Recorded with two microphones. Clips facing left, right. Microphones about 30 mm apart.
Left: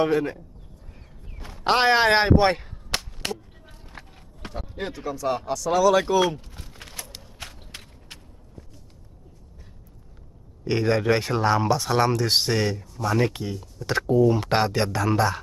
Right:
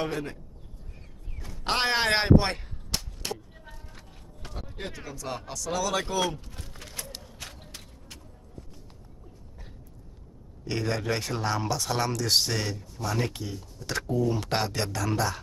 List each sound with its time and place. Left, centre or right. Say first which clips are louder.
0.0 s speech: left 9 dB; centre
1.6 s speech: left 7 dB; centre
2.9 s whip: left 6 dB; left
4.5 s speech: left 6 dB; centre
7.3 s a sound: left 3 dB; left
10.7 s speech: left 8 dB; left